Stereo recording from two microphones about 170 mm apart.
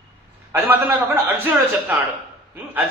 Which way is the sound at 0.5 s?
10° right (ahead or behind).